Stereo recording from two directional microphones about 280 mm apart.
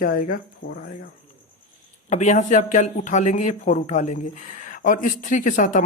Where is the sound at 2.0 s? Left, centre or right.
Left.